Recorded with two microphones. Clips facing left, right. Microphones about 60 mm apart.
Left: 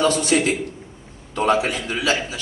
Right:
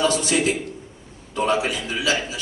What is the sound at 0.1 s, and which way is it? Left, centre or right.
A man's voice, left.